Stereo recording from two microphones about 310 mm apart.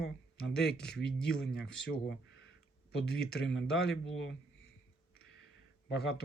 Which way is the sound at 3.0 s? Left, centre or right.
Left.